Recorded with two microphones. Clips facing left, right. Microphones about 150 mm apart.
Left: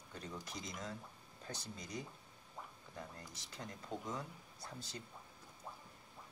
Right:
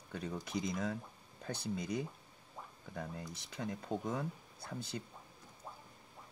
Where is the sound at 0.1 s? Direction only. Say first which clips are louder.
Right 8 dB; 60° right (ahead or behind).